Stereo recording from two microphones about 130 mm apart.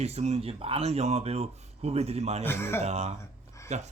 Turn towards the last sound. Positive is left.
turn(degrees=-60)  # may be behind; listen again after turning